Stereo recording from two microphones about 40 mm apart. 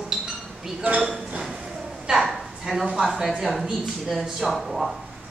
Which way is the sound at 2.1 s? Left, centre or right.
Centre.